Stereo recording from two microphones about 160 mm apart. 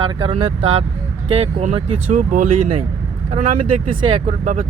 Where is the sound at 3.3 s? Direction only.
40° right (ahead or behind).